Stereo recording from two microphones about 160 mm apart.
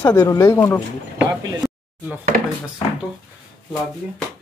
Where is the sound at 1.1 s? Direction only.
5° right (ahead or behind).